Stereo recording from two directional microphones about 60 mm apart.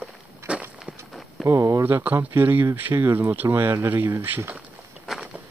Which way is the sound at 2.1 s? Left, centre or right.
Right.